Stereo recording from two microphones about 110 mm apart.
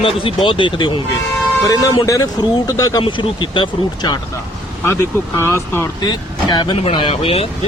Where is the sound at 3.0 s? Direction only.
50° left (ahead or behind).